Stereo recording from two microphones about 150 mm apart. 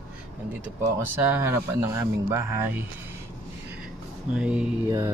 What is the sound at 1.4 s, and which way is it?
Speech, 15° right (ahead or behind).